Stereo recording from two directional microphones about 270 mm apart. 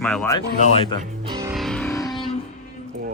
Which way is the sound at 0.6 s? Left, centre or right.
Centre.